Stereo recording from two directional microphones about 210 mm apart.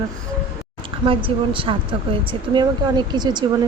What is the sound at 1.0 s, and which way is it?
A woman's voice, 25° right (ahead or behind).